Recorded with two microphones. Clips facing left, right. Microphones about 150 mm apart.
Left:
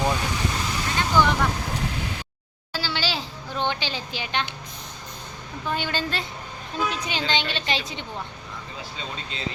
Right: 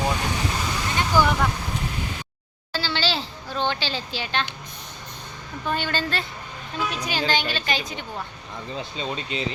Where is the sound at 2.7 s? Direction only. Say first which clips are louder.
Right 2 dB; 10° left (ahead or behind).